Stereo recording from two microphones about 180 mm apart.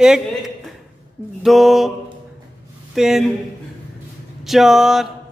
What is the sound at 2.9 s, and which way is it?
Speech, centre (ahead or behind).